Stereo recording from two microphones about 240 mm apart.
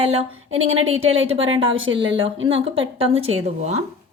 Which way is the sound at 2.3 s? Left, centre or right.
Right.